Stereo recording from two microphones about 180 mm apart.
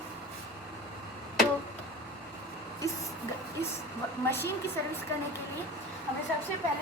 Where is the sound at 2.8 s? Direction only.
15° left (ahead or behind).